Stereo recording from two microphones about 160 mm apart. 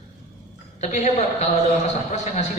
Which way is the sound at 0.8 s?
50° left (ahead or behind).